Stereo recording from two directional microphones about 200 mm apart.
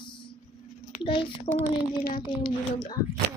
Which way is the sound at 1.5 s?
35° left (ahead or behind).